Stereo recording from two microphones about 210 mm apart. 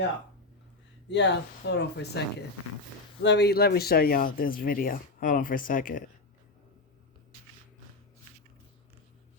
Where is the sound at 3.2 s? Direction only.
55° left (ahead or behind).